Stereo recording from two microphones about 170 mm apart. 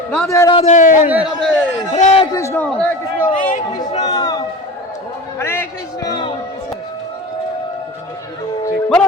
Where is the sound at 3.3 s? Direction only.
50° left (ahead or behind).